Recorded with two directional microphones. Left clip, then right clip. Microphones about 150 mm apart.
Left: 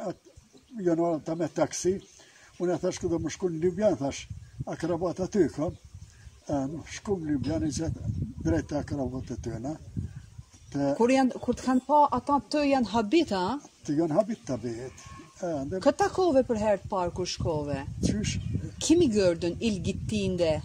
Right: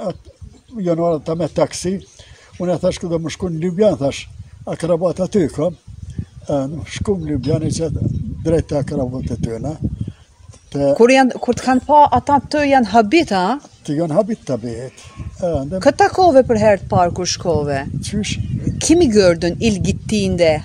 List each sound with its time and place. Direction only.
0.8 s speech: 45° right (ahead or behind)